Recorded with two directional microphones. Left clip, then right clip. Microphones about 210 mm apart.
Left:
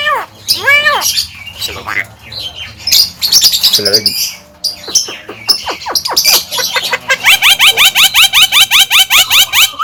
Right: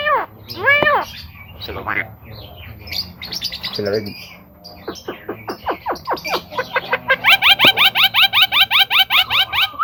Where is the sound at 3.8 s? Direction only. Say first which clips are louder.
Left 9 dB; 20° left (ahead or behind).